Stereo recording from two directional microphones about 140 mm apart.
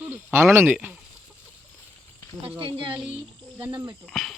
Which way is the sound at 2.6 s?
35° right (ahead or behind).